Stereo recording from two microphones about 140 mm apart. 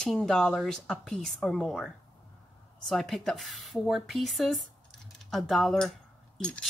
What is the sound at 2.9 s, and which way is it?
Speech, centre (ahead or behind).